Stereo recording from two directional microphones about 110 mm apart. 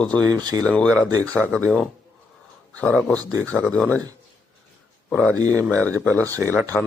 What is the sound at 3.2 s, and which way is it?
Speech, 30° right (ahead or behind).